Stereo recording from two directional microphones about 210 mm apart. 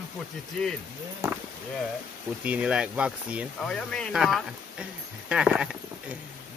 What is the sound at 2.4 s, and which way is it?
Speech, 5° right (ahead or behind).